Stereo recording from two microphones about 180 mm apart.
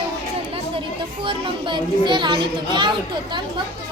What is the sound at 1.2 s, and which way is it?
A child's voice, 25° right (ahead or behind).